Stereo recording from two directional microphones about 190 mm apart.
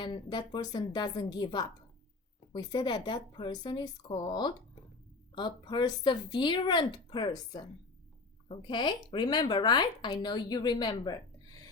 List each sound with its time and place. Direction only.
0.0 s speech: 25° left (ahead or behind)